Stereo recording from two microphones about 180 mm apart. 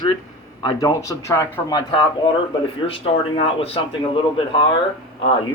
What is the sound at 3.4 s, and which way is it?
A man's voice, 30° left (ahead or behind).